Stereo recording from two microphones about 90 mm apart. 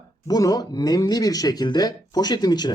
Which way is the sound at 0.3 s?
45° left (ahead or behind).